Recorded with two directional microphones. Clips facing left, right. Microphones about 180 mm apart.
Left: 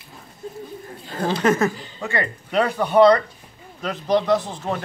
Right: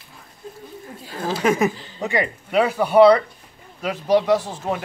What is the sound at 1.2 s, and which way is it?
Speech, 5° right (ahead or behind).